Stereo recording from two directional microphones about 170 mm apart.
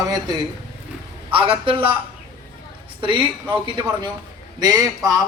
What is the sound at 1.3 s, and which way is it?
Speech, 30° right (ahead or behind).